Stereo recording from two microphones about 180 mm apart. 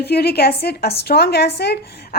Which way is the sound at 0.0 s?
60° left (ahead or behind).